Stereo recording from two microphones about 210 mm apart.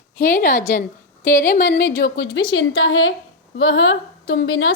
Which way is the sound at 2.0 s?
55° left (ahead or behind).